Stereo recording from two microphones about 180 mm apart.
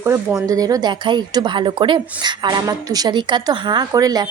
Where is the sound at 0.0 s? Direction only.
15° right (ahead or behind).